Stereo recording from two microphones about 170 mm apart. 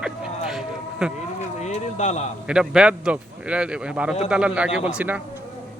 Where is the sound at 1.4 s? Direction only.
40° left (ahead or behind).